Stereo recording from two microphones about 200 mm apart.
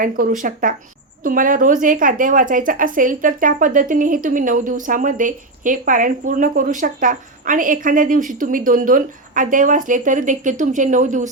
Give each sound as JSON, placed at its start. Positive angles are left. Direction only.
{"t": 0.0, "sound": "a woman's voice", "side_deg": -40}